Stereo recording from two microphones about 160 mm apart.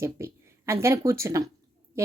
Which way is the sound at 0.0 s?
15° right (ahead or behind).